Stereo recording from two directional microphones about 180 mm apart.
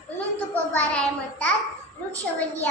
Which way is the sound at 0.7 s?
10° left (ahead or behind).